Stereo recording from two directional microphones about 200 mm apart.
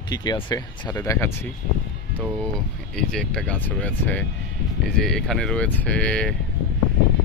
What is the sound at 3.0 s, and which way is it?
Speech, 5° left (ahead or behind).